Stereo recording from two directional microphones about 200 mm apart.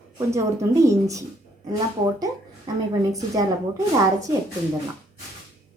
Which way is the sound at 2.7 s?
20° right (ahead or behind).